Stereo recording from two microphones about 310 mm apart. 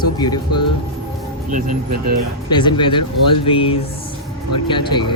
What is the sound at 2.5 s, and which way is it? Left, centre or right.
Speech, centre.